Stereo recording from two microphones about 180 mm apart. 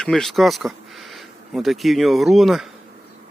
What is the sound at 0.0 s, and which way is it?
Speech, centre (ahead or behind).